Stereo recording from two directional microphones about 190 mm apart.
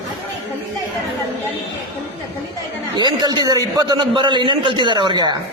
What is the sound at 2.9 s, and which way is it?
A man's voice, 20° right (ahead or behind).